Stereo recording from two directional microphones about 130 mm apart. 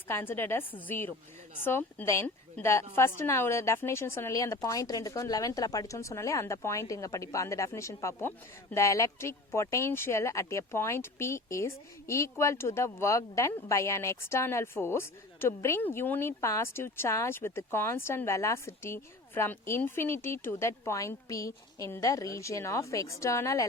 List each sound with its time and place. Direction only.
0.1 s a woman's voice: 15° left (ahead or behind)